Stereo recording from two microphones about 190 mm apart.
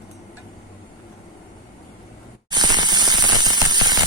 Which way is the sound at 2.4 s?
20° right (ahead or behind).